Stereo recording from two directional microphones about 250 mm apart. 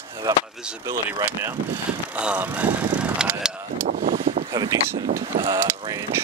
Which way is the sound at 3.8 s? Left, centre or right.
Right.